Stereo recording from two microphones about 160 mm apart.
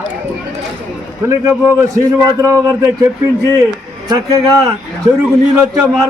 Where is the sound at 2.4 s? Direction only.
20° right (ahead or behind).